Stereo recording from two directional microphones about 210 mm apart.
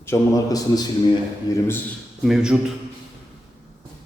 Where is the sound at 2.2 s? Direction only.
Centre (ahead or behind).